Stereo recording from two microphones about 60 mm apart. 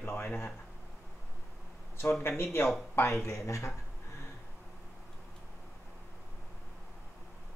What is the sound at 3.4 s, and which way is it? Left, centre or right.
Speech, left.